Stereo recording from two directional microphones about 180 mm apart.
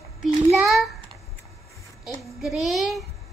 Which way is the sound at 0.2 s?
Centre (ahead or behind).